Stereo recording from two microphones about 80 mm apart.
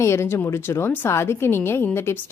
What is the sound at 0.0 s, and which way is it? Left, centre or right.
Speech, left.